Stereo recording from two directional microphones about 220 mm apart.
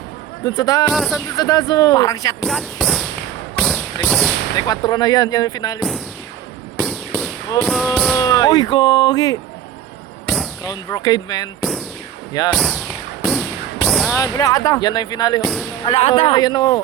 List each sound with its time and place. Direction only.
0.4 s speech: 15° left (ahead or behind)
0.9 s a sound: centre (ahead or behind)
1.4 s speech: 15° left (ahead or behind)
2.4 s speech: centre (ahead or behind)
3.6 s a sound: centre (ahead or behind)
4.5 s speech: 15° left (ahead or behind)
6.7 s fireworks: centre (ahead or behind)
7.6 s a sound: centre (ahead or behind)
8.2 s speech: 15° left (ahead or behind)
10.2 s fireworks: centre (ahead or behind)
10.6 s speech: 15° left (ahead or behind)
12.5 s speech: centre (ahead or behind)
13.2 s a sound: centre (ahead or behind)
14.2 s speech: 15° left (ahead or behind)